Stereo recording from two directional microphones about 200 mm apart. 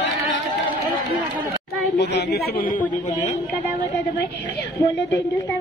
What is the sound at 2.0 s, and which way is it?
Speech, 60° left (ahead or behind).